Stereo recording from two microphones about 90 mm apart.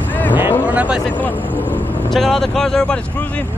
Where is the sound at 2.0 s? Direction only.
5° left (ahead or behind).